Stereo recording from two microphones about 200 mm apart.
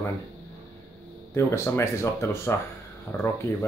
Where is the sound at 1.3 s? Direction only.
15° left (ahead or behind).